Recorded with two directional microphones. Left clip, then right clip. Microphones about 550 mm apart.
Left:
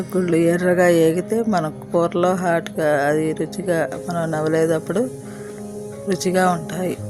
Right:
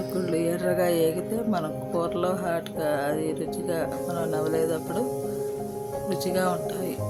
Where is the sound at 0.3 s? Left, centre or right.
Right.